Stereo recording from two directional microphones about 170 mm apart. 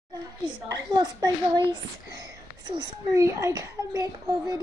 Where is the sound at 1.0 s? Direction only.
25° right (ahead or behind).